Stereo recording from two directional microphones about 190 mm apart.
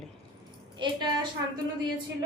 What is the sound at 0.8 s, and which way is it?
Speech, 25° right (ahead or behind).